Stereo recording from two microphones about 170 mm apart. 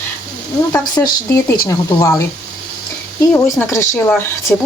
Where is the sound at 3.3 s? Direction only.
15° left (ahead or behind).